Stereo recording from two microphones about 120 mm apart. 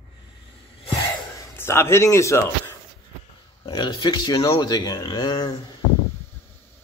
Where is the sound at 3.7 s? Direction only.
40° left (ahead or behind).